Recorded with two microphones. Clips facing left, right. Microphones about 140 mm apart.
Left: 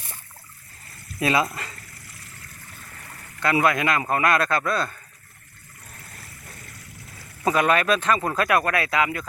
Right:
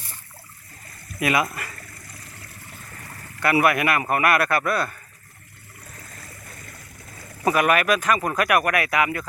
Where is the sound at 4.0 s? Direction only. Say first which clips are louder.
Right 1 dB; 20° right (ahead or behind).